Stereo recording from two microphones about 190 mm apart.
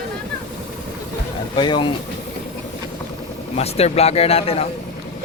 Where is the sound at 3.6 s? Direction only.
35° left (ahead or behind).